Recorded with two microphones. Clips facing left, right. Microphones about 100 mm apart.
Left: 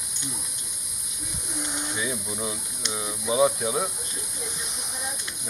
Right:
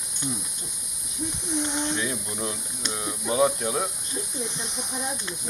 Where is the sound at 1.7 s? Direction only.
5° left (ahead or behind).